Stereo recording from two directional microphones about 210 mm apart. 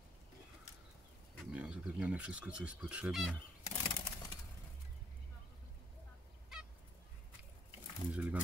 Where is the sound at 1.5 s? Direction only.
5° right (ahead or behind).